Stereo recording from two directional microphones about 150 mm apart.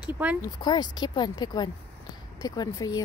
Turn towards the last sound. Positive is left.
turn(degrees=25)  # may be behind; listen again after turning